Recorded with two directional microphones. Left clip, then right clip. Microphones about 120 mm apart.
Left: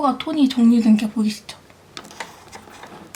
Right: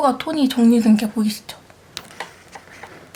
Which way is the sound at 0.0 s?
20° right (ahead or behind).